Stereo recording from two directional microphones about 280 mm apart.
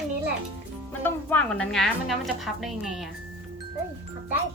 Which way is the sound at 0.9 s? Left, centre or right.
Centre.